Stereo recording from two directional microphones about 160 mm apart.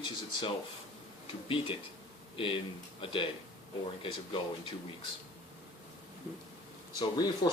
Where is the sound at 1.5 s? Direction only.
35° left (ahead or behind).